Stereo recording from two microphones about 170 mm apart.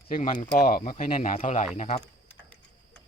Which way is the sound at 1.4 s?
40° left (ahead or behind).